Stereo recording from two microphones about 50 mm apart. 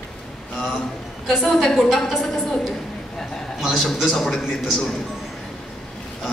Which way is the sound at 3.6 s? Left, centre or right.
Centre.